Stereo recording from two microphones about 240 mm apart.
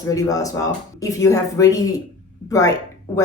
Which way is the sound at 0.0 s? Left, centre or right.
Centre.